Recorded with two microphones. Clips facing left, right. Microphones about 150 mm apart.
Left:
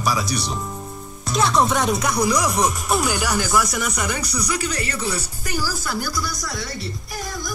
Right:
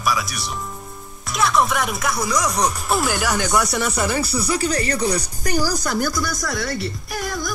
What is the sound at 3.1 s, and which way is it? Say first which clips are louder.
Speech: right 1 dB; 10° left (ahead or behind).